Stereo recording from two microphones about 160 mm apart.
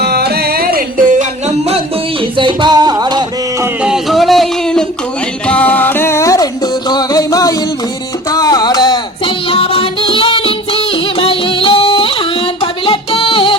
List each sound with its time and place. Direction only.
0.0 s music: 85° right; by 1.0 s 70° right (ahead or behind)
2.4 s music: 30° right (ahead or behind)
3.8 s music: centre (ahead or behind); by 12.1 s 35° left (ahead or behind)
12.8 s singing: 35° left (ahead or behind)